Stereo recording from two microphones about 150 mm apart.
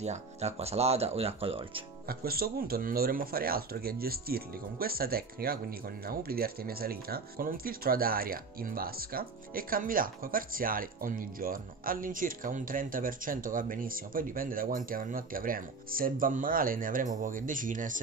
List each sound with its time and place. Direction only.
0.0 s speech: 45° right (ahead or behind)
2.0 s speech: 85° right; by 18.0 s 60° right (ahead or behind)